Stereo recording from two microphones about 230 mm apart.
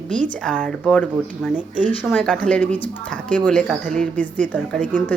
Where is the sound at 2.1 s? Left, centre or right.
Centre.